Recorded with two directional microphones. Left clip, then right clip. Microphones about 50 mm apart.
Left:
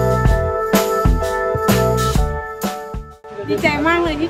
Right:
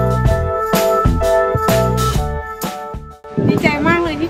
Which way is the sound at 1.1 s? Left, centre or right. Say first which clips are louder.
Right 6 dB; left.